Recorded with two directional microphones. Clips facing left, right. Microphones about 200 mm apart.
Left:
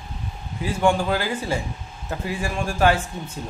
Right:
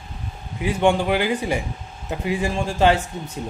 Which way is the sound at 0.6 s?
20° right (ahead or behind).